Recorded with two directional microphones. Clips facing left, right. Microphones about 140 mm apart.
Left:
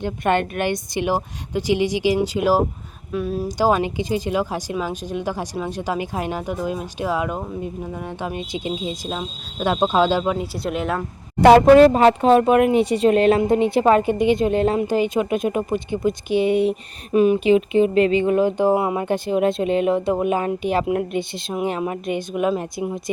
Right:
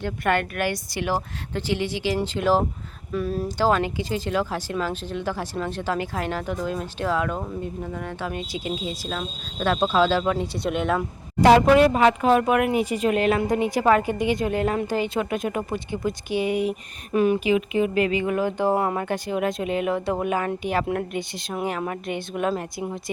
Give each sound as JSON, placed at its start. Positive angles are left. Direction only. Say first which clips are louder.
{"t": 0.0, "sound": "speech", "louder": "left 3 dB", "side_deg": 25}
{"t": 3.6, "sound": "speech", "louder": "left 3 dB", "side_deg": 15}
{"t": 10.3, "sound": "speech", "louder": "left 1 dB", "side_deg": 5}
{"t": 11.3, "sound": "speech", "louder": "left 4 dB", "side_deg": 60}
{"t": 11.6, "sound": "speech", "louder": "left 6 dB", "side_deg": 35}